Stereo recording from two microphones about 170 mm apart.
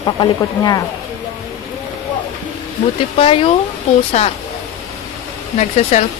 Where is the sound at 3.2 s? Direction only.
30° left (ahead or behind).